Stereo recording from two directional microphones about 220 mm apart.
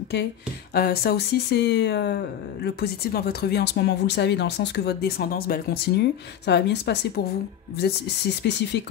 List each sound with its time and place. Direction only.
0.7 s speech: 45° left (ahead or behind)